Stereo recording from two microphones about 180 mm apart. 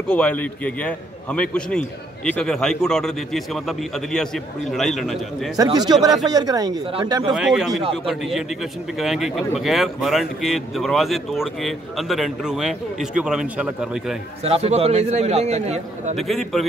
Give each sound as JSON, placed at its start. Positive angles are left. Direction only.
{"t": 0.1, "sound": "a man's voice", "side_deg": 5}
{"t": 5.6, "sound": "speech", "side_deg": -25}
{"t": 7.3, "sound": "a man's voice", "side_deg": 0}
{"t": 14.4, "sound": "a man's voice", "side_deg": -35}
{"t": 16.2, "sound": "a man's voice", "side_deg": 0}